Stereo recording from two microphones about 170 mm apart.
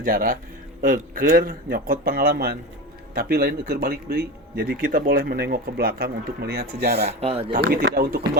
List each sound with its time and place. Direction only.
0.0 s speech: 55° right (ahead or behind); by 7.2 s 75° right (ahead or behind)
7.2 s speech: 35° right (ahead or behind)
7.5 s speech: 65° right (ahead or behind)